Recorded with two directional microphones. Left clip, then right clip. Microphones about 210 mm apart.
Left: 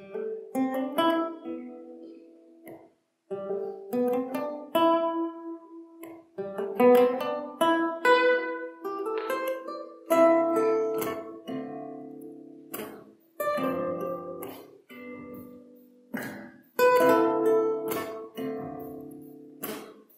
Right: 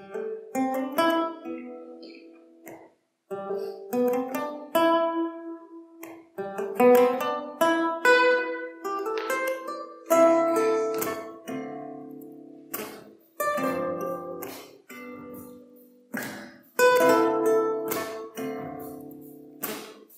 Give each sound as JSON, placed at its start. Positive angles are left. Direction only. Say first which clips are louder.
{"t": 0.0, "sound": "music", "louder": "right 1 dB", "side_deg": 20}
{"t": 3.3, "sound": "music", "louder": "right 1 dB", "side_deg": 20}
{"t": 13.4, "sound": "music", "louder": "right 2 dB", "side_deg": 15}